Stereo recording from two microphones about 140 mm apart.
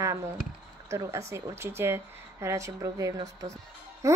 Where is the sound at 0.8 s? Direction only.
20° right (ahead or behind).